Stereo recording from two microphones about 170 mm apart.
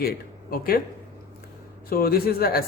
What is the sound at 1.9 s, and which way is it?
Speech, 60° left (ahead or behind).